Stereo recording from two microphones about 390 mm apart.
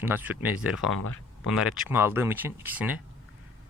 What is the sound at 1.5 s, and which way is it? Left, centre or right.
Speech, centre.